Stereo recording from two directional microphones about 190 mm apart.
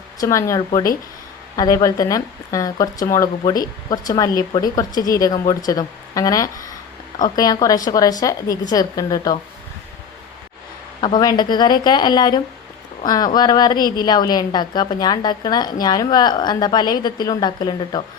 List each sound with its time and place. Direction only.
0.2 s a woman's voice: 15° left (ahead or behind)
11.0 s a woman's voice: 20° left (ahead or behind)